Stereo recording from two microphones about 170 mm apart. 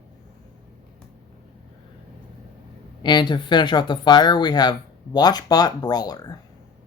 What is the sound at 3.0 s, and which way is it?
Speech, 25° left (ahead or behind).